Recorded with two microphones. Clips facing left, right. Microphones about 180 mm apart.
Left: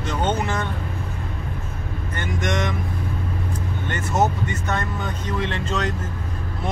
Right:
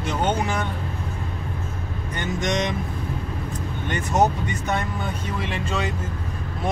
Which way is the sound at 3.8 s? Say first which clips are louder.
Right 1 dB; 15° right (ahead or behind).